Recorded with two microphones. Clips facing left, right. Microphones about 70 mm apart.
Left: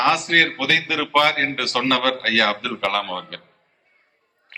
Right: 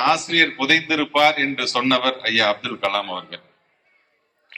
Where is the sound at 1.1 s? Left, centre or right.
Left.